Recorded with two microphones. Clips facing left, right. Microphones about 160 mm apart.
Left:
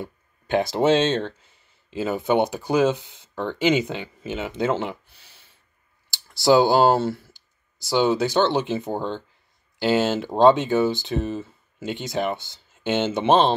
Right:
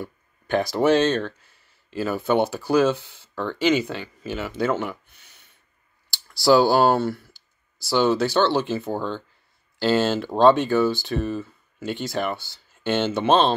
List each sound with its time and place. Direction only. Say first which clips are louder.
0.0 s speech: even; 20° left (ahead or behind)